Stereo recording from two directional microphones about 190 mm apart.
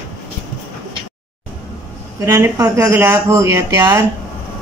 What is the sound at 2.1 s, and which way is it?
Speech, 15° right (ahead or behind).